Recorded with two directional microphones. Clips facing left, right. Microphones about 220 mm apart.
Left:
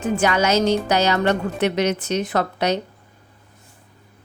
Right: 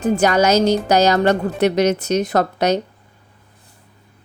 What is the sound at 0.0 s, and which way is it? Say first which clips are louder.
A woman's voice: right 4 dB; 40° right (ahead or behind).